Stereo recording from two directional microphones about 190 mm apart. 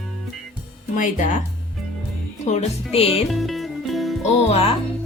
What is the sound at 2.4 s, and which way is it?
Speech, 35° left (ahead or behind).